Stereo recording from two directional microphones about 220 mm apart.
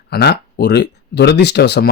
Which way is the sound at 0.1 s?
45° left (ahead or behind).